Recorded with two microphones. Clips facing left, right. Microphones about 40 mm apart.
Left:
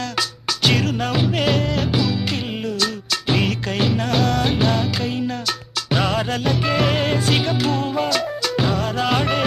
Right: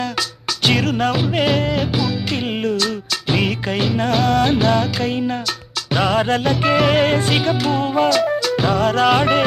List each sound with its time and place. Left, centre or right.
0.2 s music: centre
2.5 s music: right
2.7 s music: centre
4.1 s music of bollywood: centre
5.0 s music: right
5.9 s music of bollywood: centre
6.6 s music: centre
7.3 s music: centre
7.8 s music: centre
8.1 s music: centre